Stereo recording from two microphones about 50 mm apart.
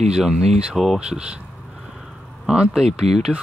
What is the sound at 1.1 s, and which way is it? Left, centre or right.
Speech, centre.